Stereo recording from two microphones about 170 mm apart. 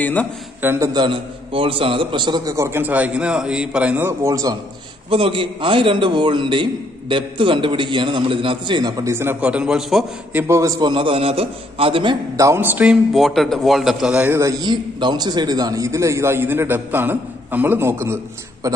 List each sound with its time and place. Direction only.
0.0 s a man's voice: 10° left (ahead or behind)
0.6 s a man's voice: 15° right (ahead or behind)
5.1 s a man's voice: 30° right (ahead or behind); by 10.4 s centre (ahead or behind)
10.4 s a man's voice: 15° right (ahead or behind)
13.1 s a man's voice: centre (ahead or behind)
14.6 s a man's voice: 25° right (ahead or behind)